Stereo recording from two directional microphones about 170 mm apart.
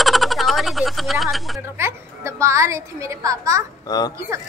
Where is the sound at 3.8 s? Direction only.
25° left (ahead or behind).